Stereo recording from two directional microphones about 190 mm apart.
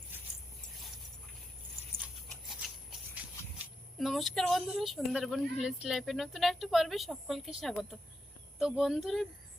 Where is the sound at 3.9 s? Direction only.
Centre (ahead or behind).